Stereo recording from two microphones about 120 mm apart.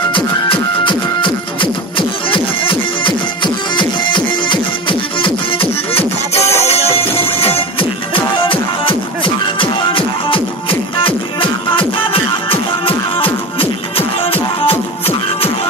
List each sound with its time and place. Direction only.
0.1 s music: 45° left (ahead or behind)